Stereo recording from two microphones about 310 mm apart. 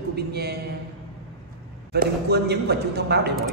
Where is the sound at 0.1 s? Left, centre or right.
Right.